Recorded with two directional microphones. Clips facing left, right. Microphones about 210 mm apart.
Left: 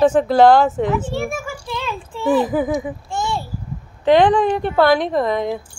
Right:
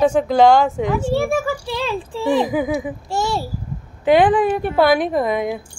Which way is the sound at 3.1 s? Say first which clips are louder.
Right 4 dB; 40° right (ahead or behind).